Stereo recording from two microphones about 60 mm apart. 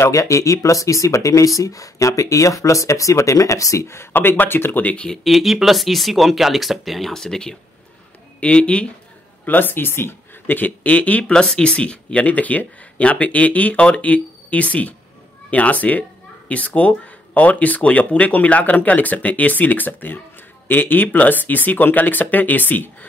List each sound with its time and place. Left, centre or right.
0.0 s speech: left
4.1 s speech: left
4.8 s speech: left
5.1 s speech: centre
9.5 s speech: left
11.3 s speech: centre; by 22.8 s left